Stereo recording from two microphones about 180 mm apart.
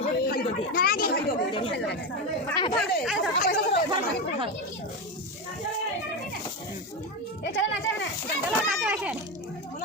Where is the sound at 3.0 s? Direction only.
5° right (ahead or behind).